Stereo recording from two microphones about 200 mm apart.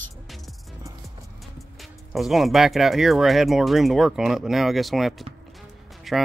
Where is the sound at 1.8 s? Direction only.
Centre (ahead or behind).